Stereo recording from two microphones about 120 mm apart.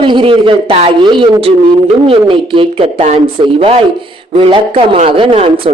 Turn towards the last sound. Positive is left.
turn(degrees=-50)  # may be behind; listen again after turning